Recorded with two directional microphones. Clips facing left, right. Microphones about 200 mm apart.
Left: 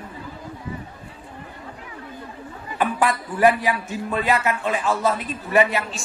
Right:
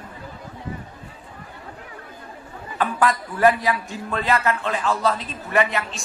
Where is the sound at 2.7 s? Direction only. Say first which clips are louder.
Even; 15° left (ahead or behind).